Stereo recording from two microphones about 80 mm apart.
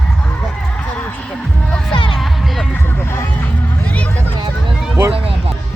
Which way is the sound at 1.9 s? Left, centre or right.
Left.